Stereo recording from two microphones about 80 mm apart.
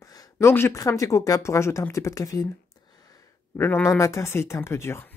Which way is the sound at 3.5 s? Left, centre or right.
Left.